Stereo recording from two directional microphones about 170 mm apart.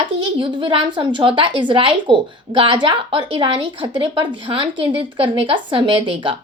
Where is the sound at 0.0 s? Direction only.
30° right (ahead or behind).